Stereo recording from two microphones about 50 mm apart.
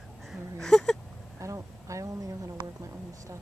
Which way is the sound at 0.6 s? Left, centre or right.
Centre.